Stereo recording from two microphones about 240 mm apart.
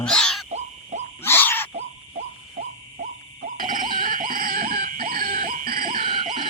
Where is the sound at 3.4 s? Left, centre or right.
Right.